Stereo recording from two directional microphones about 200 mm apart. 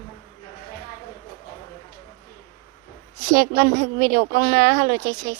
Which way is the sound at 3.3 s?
50° right (ahead or behind).